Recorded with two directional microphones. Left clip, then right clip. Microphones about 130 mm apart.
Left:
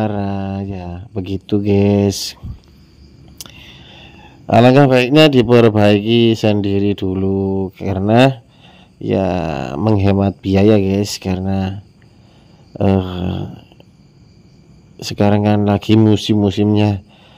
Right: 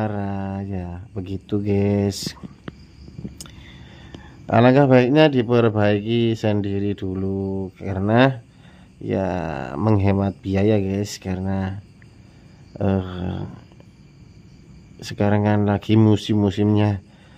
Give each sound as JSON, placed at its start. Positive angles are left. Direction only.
{"t": 0.0, "sound": "a sound", "side_deg": 30}
{"t": 3.3, "sound": "speech", "side_deg": 30}
{"t": 15.0, "sound": "speech", "side_deg": 30}